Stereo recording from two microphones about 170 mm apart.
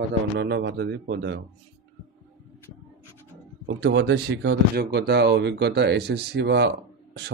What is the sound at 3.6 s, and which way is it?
Speech, 90° right.